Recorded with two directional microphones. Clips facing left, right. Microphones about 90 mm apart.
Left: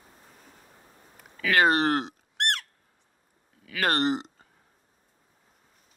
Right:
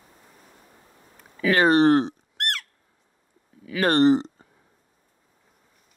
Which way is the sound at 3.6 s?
30° right (ahead or behind).